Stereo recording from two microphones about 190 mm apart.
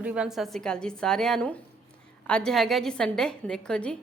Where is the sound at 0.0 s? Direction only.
5° right (ahead or behind).